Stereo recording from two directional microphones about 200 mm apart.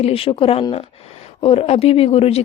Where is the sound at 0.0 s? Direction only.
30° left (ahead or behind).